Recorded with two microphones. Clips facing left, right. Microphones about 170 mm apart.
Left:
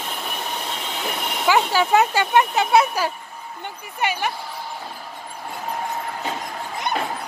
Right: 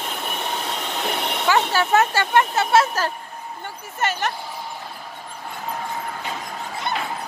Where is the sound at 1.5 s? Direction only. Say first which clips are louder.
Left 1 dB; 15° left (ahead or behind).